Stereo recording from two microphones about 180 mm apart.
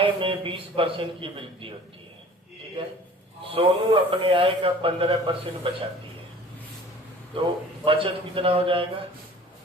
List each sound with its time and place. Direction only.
0.0 s a man's voice: 30° right (ahead or behind)
3.5 s a man's voice: 30° right (ahead or behind)
7.3 s a man's voice: 30° right (ahead or behind)